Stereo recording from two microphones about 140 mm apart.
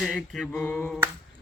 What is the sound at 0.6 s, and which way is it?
Mantra, 15° left (ahead or behind).